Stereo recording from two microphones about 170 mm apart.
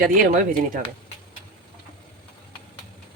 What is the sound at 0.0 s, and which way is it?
Speech, 55° right (ahead or behind).